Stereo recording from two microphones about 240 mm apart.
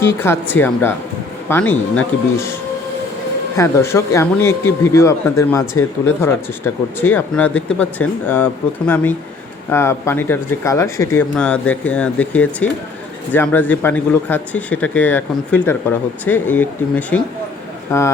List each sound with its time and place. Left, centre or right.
0.0 s speech: centre
3.6 s speech: centre
9.6 s speech: centre